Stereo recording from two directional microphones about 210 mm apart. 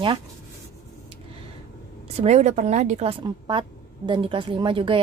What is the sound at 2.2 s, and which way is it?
A woman's voice, 30° right (ahead or behind).